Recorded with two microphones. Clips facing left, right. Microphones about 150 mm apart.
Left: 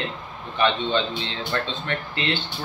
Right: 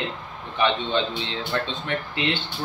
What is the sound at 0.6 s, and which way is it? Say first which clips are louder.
A man's voice: left 1 dB; 15° right (ahead or behind).